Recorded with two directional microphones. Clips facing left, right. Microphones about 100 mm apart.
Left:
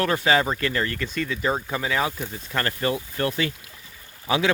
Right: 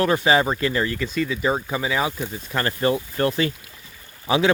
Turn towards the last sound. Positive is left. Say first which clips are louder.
# right 3 dB
turn(degrees=-25)  # may be behind; listen again after turning